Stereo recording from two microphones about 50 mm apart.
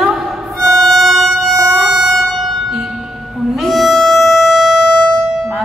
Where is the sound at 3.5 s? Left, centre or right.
Centre.